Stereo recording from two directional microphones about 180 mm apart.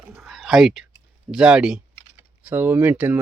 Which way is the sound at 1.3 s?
5° right (ahead or behind).